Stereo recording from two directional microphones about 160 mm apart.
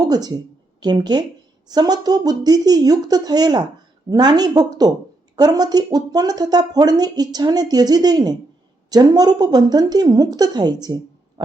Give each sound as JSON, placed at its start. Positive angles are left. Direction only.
{"t": 0.1, "sound": "speech", "side_deg": -25}